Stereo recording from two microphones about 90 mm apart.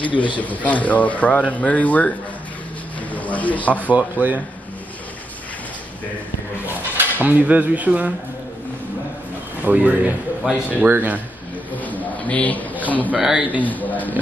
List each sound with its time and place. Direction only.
0.4 s speech: 15° left (ahead or behind)
3.1 s a sound: 15° left (ahead or behind)
3.9 s speech: 20° right (ahead or behind)
6.6 s speech: 20° right (ahead or behind)
9.7 s speech: 15° right (ahead or behind)
11.8 s a sound: 15° left (ahead or behind)
13.2 s speech: 10° right (ahead or behind)
13.6 s speech: 20° left (ahead or behind)